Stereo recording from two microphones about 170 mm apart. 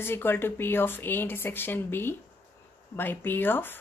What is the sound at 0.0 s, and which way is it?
Speech, 15° left (ahead or behind).